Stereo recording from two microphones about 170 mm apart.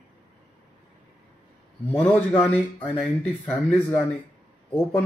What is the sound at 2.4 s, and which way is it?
Speech, 10° left (ahead or behind).